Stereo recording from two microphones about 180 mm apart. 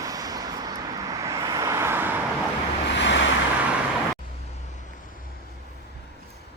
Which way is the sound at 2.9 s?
85° left.